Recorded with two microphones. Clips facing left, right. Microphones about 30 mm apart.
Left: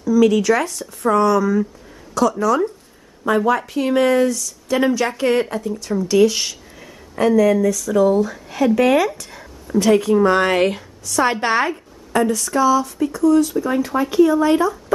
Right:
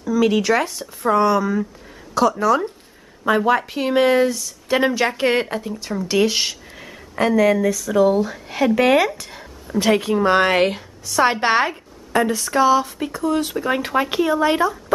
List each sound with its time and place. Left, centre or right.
0.0 s speech: right
8.1 s speech: right